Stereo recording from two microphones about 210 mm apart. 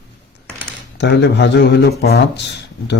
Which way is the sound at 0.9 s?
55° left (ahead or behind).